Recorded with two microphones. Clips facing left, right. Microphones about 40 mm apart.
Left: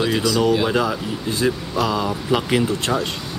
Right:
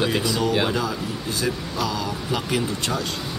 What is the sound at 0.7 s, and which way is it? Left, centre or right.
Speech, left.